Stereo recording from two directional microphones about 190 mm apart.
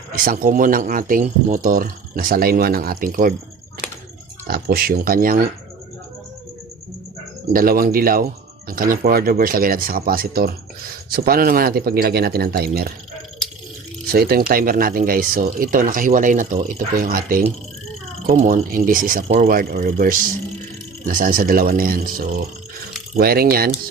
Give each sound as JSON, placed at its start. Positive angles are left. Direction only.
{"t": 0.3, "sound": "speech", "side_deg": -45}
{"t": 4.4, "sound": "speech", "side_deg": -50}
{"t": 7.5, "sound": "speech", "side_deg": -50}
{"t": 14.1, "sound": "speech", "side_deg": -50}
{"t": 23.1, "sound": "speech", "side_deg": -55}